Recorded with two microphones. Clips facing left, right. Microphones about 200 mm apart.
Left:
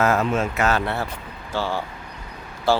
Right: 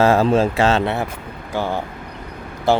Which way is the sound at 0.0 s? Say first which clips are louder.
Right 6 dB; 30° right (ahead or behind).